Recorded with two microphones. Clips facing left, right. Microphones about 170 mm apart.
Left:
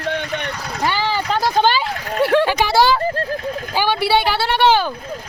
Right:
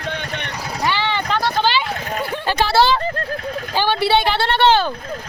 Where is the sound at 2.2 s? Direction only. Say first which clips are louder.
Left 11 dB; 80° left.